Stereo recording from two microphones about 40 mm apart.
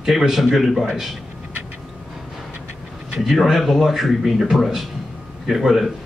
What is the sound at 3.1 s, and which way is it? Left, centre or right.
A man's voice, centre.